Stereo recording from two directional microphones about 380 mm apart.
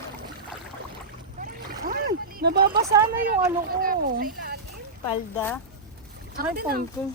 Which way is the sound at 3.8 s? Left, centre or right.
Right.